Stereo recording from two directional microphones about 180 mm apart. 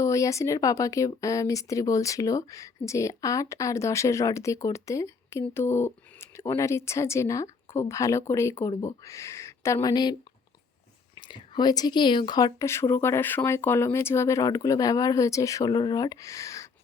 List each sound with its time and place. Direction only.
0.0 s speech: 15° left (ahead or behind)
11.3 s speech: 25° left (ahead or behind)